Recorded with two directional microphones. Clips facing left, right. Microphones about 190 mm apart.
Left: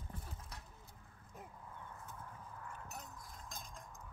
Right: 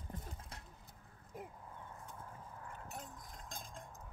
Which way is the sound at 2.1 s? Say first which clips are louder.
Even; 30° right (ahead or behind).